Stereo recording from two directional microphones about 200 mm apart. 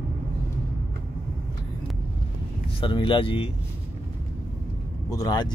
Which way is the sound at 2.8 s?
25° left (ahead or behind).